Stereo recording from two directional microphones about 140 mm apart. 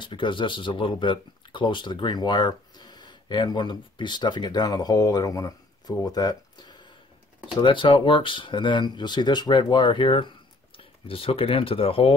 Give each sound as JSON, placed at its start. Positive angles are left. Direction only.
{"t": 0.0, "sound": "speech", "side_deg": 35}